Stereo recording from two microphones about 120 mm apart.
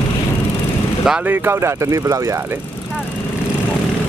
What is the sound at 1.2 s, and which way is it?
Speech, 15° right (ahead or behind).